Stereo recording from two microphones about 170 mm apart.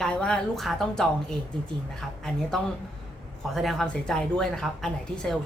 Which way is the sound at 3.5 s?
Centre (ahead or behind).